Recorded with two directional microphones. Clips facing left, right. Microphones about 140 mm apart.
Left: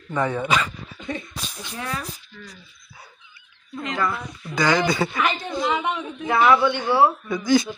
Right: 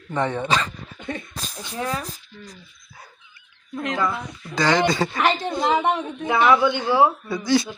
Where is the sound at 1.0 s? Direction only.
50° right (ahead or behind).